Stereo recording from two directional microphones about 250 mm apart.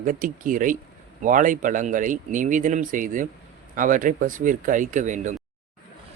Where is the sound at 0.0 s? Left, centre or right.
Right.